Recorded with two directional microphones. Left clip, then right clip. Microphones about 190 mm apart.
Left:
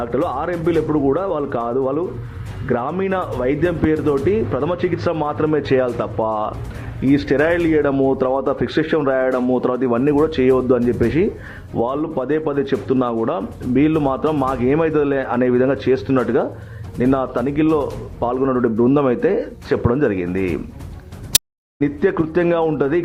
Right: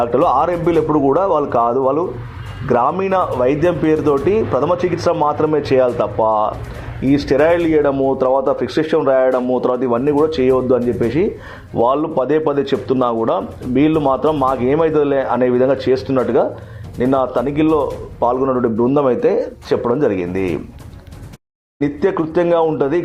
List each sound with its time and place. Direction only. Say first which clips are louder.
0.0 s speech: right 7 dB; 5° left (ahead or behind)
21.8 s speech: right 1 dB; 15° left (ahead or behind)